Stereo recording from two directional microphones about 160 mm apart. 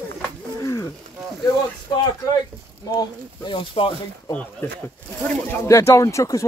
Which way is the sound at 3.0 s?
30° left (ahead or behind).